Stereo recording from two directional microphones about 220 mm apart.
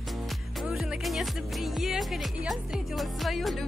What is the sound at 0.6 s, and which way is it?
Music, centre (ahead or behind).